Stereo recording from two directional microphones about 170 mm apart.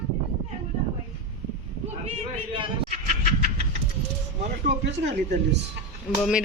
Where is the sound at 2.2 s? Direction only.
40° right (ahead or behind).